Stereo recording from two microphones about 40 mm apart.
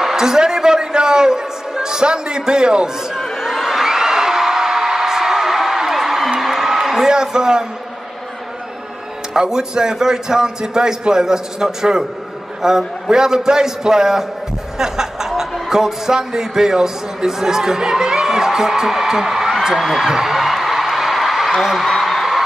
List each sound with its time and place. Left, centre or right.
0.0 s a sound: centre
3.3 s whoop: centre
6.4 s a sound: centre
9.3 s a man's voice: centre
14.8 s chuckle: centre
15.7 s a man's voice: centre
19.6 s a sound: centre
21.5 s a man's voice: centre
22.0 s music: centre